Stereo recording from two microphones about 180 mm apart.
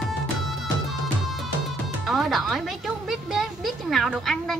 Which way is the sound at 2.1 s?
Centre (ahead or behind).